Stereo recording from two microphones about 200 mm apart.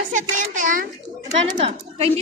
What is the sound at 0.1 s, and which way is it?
Speech, 40° right (ahead or behind).